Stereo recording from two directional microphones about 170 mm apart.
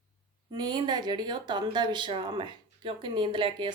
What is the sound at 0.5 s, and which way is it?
A woman's voice, 25° right (ahead or behind).